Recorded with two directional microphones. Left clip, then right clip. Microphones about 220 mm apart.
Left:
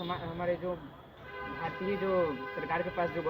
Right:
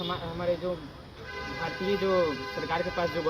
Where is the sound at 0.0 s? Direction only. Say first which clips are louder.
Right 3 dB; 20° right (ahead or behind).